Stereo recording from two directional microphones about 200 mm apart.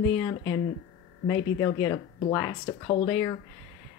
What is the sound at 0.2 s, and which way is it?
Speech, 15° left (ahead or behind).